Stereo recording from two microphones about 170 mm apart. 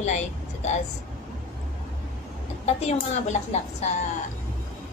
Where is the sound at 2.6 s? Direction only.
40° left (ahead or behind).